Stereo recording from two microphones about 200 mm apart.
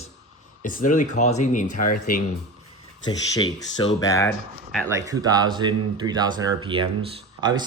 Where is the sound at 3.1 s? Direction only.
20° left (ahead or behind).